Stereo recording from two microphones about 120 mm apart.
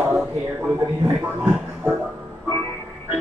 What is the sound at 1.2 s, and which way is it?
Music, 5° right (ahead or behind).